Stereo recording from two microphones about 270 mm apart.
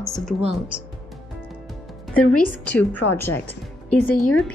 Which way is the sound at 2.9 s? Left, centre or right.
Left.